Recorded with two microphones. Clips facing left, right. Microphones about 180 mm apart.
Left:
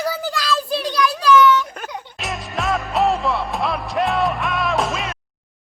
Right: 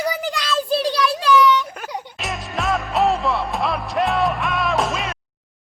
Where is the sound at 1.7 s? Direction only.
10° right (ahead or behind).